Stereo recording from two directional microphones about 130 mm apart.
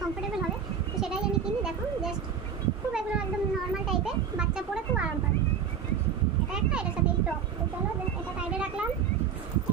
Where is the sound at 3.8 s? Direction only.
5° right (ahead or behind).